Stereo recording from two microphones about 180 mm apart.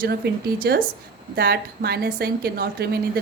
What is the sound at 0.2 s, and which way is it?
A woman's voice, 60° right (ahead or behind).